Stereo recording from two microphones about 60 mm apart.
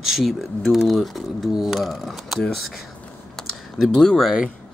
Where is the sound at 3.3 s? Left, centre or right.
Centre.